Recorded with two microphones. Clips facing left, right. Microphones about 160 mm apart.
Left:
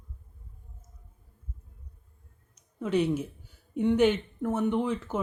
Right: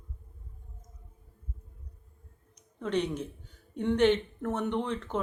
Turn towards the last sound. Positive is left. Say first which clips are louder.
# left 3 dB
turn(degrees=5)  # may be behind; listen again after turning